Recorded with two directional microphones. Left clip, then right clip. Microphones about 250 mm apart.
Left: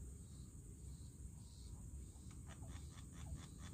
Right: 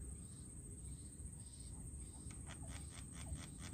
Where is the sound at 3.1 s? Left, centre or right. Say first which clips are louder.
Right 4 dB; right.